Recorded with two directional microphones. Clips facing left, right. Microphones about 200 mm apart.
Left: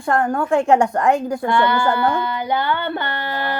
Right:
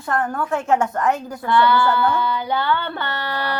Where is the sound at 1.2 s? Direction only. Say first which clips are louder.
Left 8 dB; 25° left (ahead or behind).